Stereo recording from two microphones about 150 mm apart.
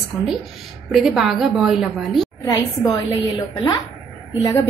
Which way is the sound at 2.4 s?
25° left (ahead or behind).